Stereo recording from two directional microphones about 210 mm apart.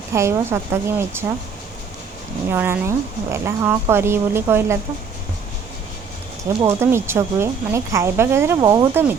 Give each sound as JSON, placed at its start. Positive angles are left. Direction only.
{"t": 0.1, "sound": "a woman's voice", "side_deg": -15}
{"t": 2.5, "sound": "a woman's voice", "side_deg": -10}
{"t": 6.6, "sound": "a woman's voice", "side_deg": -10}